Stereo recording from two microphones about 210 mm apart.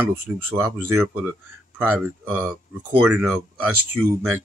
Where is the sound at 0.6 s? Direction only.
15° right (ahead or behind).